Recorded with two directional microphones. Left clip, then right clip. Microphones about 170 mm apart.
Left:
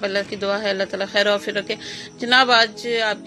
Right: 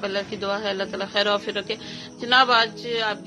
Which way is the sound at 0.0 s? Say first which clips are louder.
Left 4 dB; 20° left (ahead or behind).